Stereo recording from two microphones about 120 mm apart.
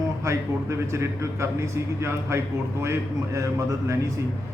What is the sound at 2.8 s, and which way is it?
A man's voice, 25° right (ahead or behind).